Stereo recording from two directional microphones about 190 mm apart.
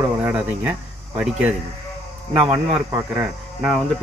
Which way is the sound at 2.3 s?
30° right (ahead or behind).